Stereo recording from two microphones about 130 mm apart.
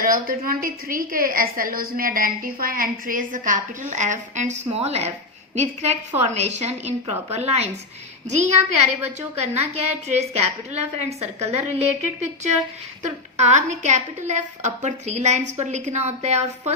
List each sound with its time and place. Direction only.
0.0 s a woman's voice: 90° right; by 16.7 s 60° right (ahead or behind)